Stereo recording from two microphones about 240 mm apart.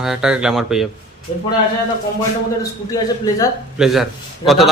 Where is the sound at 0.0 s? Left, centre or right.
Centre.